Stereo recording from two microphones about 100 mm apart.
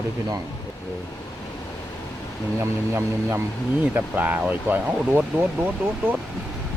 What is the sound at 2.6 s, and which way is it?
Speech, 25° right (ahead or behind).